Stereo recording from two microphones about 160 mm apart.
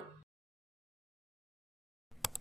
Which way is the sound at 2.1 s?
Centre (ahead or behind).